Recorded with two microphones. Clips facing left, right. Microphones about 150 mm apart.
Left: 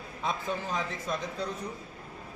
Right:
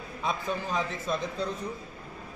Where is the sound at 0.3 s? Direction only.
20° right (ahead or behind).